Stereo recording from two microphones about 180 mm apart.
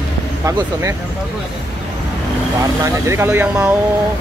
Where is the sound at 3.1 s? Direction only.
10° right (ahead or behind).